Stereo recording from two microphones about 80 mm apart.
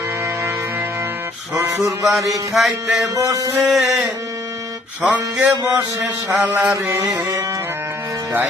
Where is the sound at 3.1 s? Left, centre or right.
Right.